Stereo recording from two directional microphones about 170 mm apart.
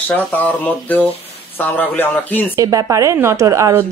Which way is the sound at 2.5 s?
20° right (ahead or behind).